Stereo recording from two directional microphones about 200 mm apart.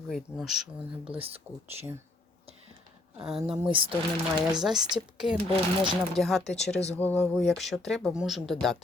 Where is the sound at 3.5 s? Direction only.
5° right (ahead or behind).